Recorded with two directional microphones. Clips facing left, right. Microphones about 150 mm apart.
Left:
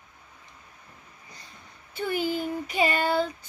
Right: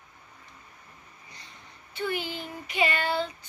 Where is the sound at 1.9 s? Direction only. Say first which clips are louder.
Left 4 dB; 45° left (ahead or behind).